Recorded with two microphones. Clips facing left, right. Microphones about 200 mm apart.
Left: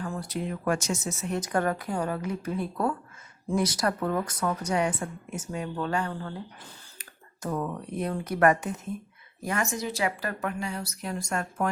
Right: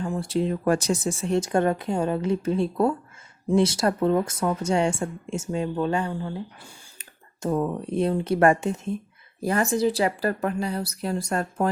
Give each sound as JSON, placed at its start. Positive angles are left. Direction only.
{"t": 0.0, "sound": "speech", "side_deg": -25}